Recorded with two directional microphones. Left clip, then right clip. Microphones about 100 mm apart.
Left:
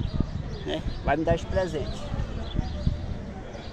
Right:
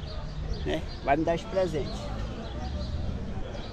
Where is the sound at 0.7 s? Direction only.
10° right (ahead or behind).